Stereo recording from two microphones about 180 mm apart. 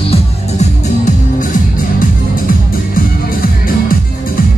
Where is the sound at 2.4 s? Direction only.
55° left (ahead or behind).